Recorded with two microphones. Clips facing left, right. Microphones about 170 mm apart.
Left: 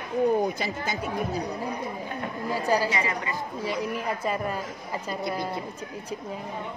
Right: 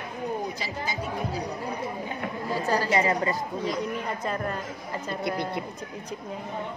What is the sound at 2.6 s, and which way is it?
Speech, 15° left (ahead or behind).